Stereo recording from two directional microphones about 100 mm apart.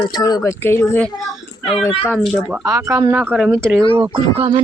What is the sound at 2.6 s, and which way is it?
Speech, 30° right (ahead or behind).